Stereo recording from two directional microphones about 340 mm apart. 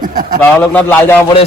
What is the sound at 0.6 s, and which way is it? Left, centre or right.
Speech, centre.